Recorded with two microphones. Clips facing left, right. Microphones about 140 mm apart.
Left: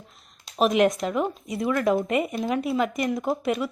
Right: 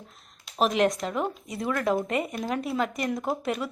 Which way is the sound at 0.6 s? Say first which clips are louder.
Left 3 dB; 10° left (ahead or behind).